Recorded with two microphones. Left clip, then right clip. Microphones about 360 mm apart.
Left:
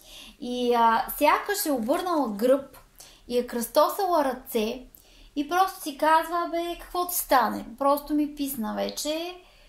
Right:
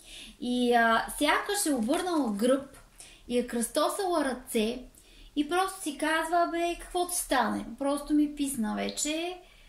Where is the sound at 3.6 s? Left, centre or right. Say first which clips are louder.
Left 9 dB; centre.